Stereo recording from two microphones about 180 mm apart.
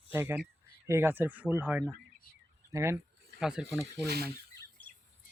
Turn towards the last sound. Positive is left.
turn(degrees=-60)  # may be behind; listen again after turning